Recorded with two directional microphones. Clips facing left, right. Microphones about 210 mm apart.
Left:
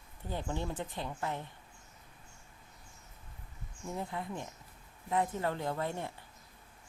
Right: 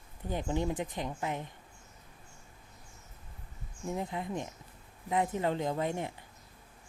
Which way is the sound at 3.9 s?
20° right (ahead or behind).